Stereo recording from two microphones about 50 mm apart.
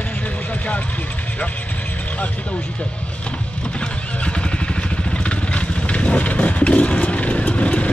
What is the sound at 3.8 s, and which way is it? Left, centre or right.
Vehicle, left.